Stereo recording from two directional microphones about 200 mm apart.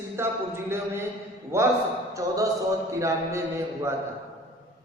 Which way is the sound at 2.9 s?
15° right (ahead or behind).